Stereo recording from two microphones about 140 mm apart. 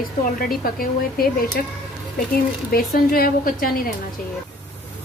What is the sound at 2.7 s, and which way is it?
A woman's voice, 90° left.